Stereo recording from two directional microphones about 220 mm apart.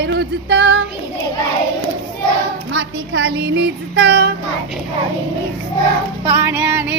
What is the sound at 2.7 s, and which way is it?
Speech, 55° right (ahead or behind).